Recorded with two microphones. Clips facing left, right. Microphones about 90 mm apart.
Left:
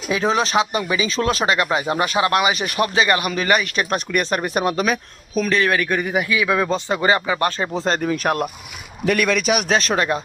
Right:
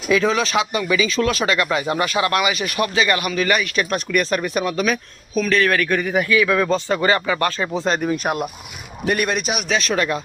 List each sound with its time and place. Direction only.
0.1 s speech: 30° left (ahead or behind)
4.8 s speech: 20° left (ahead or behind)
8.1 s speech: 50° left (ahead or behind)
9.0 s a man's voice: 90° left
9.6 s speech: 35° left (ahead or behind)